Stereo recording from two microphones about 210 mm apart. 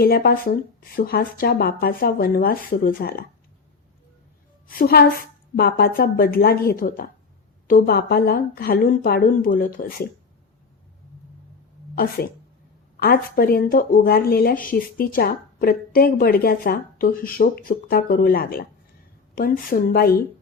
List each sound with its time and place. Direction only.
0.0 s speech: 45° left (ahead or behind)
4.8 s speech: 45° left (ahead or behind)
13.0 s speech: 45° left (ahead or behind)